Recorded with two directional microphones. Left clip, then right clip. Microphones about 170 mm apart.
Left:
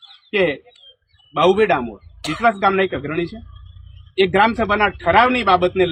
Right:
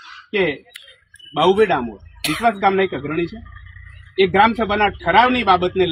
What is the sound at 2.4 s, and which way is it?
A man's voice, 5° right (ahead or behind).